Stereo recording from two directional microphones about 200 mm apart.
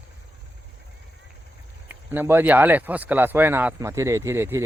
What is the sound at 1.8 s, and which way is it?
Speech, 10° right (ahead or behind).